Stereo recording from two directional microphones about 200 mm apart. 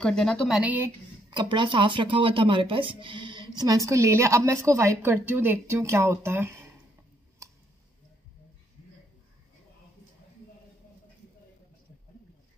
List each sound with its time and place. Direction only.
0.0 s a woman's voice: 5° left (ahead or behind)
1.3 s speech: 25° right (ahead or behind)
7.4 s a sound: 15° right (ahead or behind)